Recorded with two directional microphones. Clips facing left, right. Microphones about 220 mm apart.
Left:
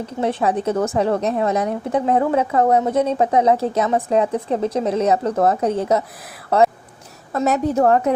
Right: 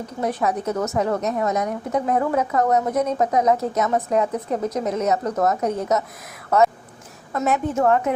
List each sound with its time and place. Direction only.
0.2 s a woman's voice: 25° left (ahead or behind)